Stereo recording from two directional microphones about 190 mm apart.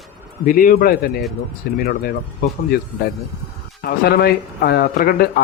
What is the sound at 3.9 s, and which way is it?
Speech, 55° left (ahead or behind).